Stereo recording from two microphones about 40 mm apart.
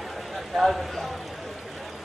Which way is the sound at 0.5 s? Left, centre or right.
Centre.